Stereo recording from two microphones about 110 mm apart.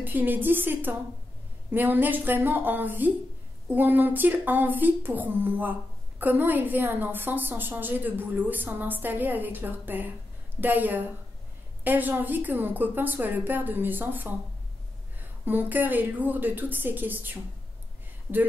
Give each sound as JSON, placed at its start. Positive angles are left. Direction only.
{"t": 0.0, "sound": "speech", "side_deg": -15}
{"t": 15.4, "sound": "speech", "side_deg": -15}